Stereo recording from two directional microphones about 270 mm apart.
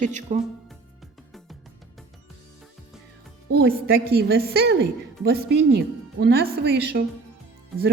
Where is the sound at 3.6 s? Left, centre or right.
Right.